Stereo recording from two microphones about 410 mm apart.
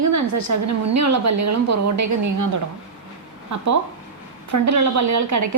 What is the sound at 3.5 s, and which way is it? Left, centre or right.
A woman's voice, right.